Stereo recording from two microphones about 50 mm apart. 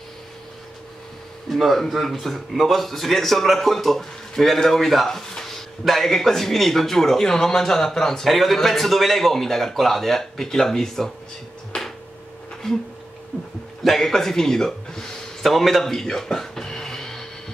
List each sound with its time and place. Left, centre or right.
1.5 s speech: centre
11.7 s a sound: centre
13.8 s speech: centre